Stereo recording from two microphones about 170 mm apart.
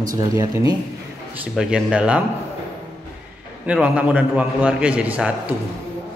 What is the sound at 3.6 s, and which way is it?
A man's voice, 10° right (ahead or behind).